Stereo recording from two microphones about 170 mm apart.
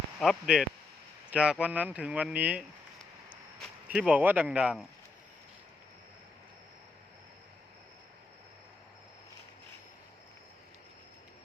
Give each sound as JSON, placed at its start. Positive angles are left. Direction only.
{"t": 0.2, "sound": "speech", "side_deg": 0}
{"t": 3.8, "sound": "speech", "side_deg": -5}